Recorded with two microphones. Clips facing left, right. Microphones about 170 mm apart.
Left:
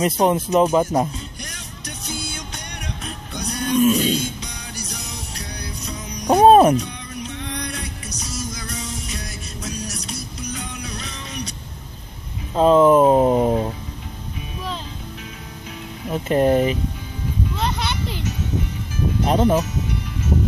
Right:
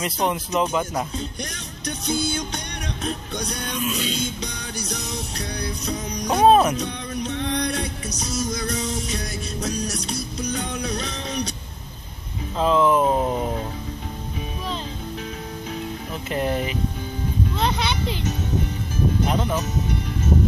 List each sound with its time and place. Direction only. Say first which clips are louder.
0.0 s speech: left 6 dB; 40° left (ahead or behind)
3.8 s music: left 10 dB; 45° left (ahead or behind)
5.9 s music: right 4 dB; 40° right (ahead or behind)
6.2 s music: left 4 dB; 45° left (ahead or behind)
6.8 s music: right 3 dB; 40° right (ahead or behind)
12.5 s speech: left 6 dB; 40° left (ahead or behind)
16.1 s speech: left 9 dB; 40° left (ahead or behind)
17.6 s a sound: right 3 dB; 5° left (ahead or behind)
19.2 s speech: left 6 dB; 30° left (ahead or behind)